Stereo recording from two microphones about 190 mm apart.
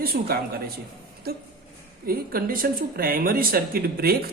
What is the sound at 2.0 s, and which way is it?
Speech, 50° right (ahead or behind).